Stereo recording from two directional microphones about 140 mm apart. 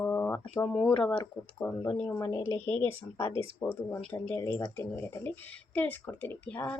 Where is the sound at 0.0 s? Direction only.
15° left (ahead or behind).